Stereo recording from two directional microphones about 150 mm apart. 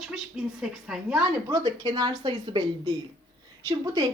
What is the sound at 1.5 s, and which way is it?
Speech, 25° right (ahead or behind).